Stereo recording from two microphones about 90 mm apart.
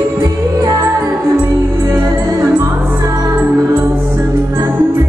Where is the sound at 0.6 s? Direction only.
40° right (ahead or behind).